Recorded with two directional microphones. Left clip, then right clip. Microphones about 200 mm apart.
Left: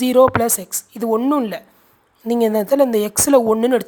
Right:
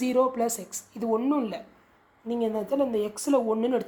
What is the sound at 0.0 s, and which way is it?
A woman's voice, 35° left (ahead or behind).